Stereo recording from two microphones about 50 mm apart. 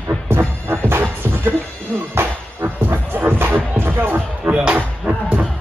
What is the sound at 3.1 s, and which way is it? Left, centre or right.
Music, right.